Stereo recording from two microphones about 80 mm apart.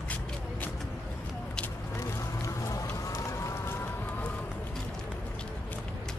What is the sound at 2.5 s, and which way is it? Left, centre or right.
Music, left.